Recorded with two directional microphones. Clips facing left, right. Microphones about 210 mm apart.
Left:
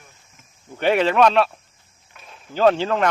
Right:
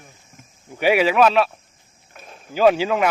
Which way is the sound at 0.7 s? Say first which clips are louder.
Right 1 dB; 10° right (ahead or behind).